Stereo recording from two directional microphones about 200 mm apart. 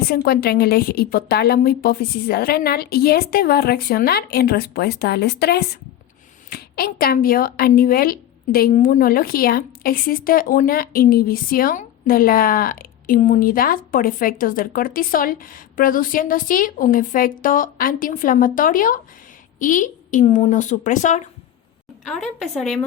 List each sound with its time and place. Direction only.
0.1 s a woman's voice: 50° left (ahead or behind)
22.0 s a woman's voice: centre (ahead or behind)